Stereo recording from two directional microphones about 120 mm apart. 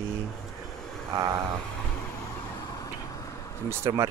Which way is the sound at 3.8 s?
25° right (ahead or behind).